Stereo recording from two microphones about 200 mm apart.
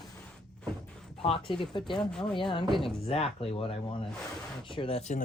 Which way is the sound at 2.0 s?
5° left (ahead or behind).